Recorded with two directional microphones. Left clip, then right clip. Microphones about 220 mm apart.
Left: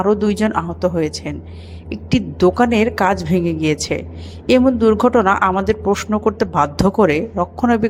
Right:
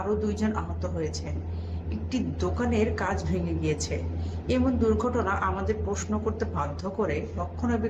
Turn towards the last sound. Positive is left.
turn(degrees=45)  # may be behind; listen again after turning